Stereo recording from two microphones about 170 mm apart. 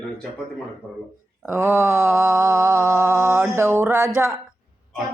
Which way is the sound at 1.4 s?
15° right (ahead or behind).